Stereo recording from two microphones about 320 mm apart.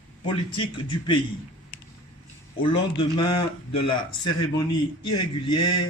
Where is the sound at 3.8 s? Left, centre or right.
Left.